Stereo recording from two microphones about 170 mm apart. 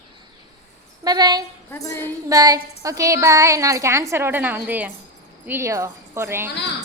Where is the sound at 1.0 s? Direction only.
25° right (ahead or behind).